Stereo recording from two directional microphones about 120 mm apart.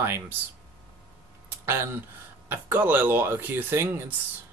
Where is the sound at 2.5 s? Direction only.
15° right (ahead or behind).